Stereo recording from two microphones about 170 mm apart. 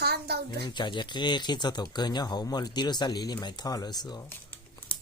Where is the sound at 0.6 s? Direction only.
25° left (ahead or behind).